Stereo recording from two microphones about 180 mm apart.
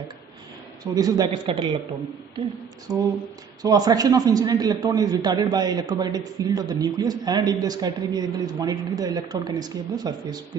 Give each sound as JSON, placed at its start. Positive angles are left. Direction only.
{"t": 0.9, "sound": "a man's voice", "side_deg": -20}
{"t": 2.9, "sound": "a man's voice", "side_deg": -20}